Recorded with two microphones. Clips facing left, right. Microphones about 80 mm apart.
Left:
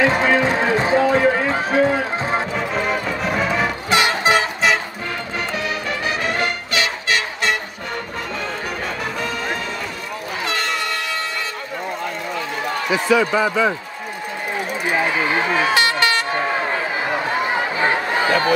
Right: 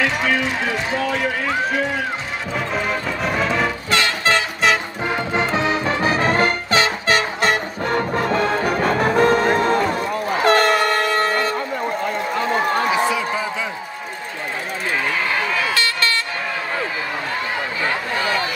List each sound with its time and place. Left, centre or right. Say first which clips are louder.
0.0 s a sound: left 4 dB; left
2.7 s music: even; centre
3.9 s music: left 3 dB; centre
5.5 s music: right 4 dB; right
8.3 s music: right 7 dB; right
10.4 s train: right 9 dB; right
15.0 s vehicle: left 2 dB; left